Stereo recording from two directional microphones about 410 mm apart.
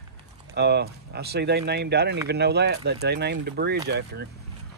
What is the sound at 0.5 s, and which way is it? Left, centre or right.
Speech, right.